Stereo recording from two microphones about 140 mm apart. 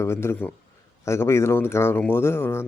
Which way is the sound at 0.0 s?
20° left (ahead or behind).